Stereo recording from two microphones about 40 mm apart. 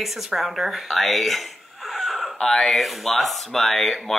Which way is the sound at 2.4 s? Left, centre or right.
Centre.